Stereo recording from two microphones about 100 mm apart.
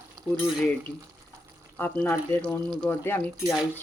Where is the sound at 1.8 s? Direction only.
20° left (ahead or behind).